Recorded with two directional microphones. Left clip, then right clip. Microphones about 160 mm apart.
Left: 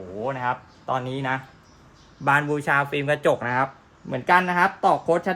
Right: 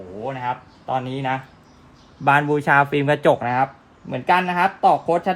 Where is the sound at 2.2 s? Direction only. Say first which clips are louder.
Right 4 dB; 45° right (ahead or behind).